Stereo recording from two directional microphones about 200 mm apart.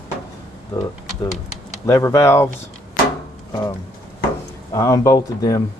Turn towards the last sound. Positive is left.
turn(degrees=15)  # may be behind; listen again after turning